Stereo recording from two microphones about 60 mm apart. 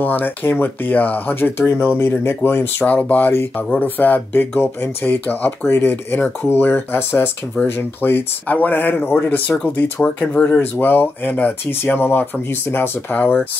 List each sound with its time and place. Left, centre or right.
0.0 s speech: left
2.9 s speech: left
10.6 s speech: left